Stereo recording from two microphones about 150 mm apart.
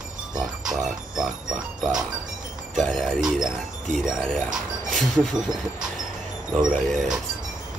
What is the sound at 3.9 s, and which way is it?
Speech, centre (ahead or behind).